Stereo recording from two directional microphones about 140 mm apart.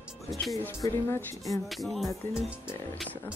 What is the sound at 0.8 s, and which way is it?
Speech, 15° left (ahead or behind).